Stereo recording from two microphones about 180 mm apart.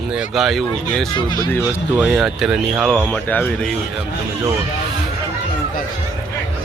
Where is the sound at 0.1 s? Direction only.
5° right (ahead or behind).